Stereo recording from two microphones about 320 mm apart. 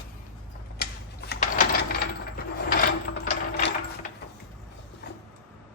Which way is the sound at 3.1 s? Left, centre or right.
Left.